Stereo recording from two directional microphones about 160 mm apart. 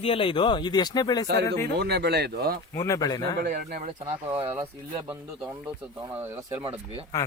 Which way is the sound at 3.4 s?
65° right (ahead or behind).